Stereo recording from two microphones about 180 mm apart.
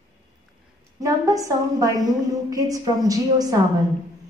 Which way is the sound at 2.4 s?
20° right (ahead or behind).